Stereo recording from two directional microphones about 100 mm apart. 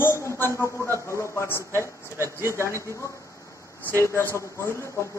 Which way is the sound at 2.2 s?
25° right (ahead or behind).